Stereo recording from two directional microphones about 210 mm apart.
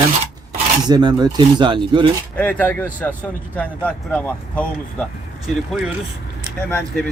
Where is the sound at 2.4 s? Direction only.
10° left (ahead or behind).